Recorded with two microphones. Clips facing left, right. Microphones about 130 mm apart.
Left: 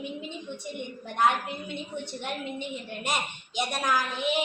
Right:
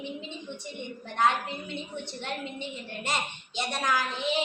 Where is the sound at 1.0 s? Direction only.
10° left (ahead or behind).